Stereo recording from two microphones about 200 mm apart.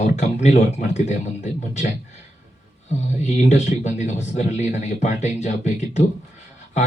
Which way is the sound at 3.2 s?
35° left (ahead or behind).